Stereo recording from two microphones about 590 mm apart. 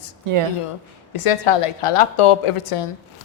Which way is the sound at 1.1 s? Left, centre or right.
Left.